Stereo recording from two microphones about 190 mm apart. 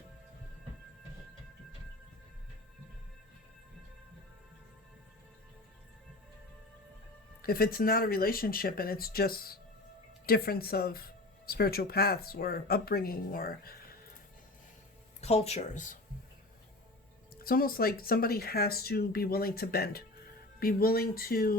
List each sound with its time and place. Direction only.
7.4 s speech: 50° left (ahead or behind)
15.2 s speech: 35° left (ahead or behind)
17.3 s speech: 50° left (ahead or behind)